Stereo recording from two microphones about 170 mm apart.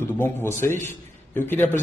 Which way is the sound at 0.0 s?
15° left (ahead or behind).